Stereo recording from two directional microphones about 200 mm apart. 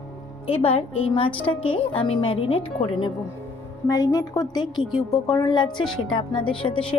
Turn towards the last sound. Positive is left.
turn(degrees=25)  # may be behind; listen again after turning